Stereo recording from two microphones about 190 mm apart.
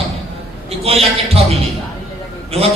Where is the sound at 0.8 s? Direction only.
30° right (ahead or behind).